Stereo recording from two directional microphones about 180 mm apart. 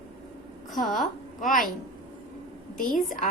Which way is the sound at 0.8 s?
Centre (ahead or behind).